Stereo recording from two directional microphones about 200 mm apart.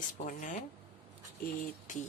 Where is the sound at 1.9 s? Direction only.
40° left (ahead or behind).